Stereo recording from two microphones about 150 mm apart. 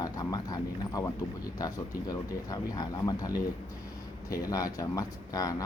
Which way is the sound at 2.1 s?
25° left (ahead or behind).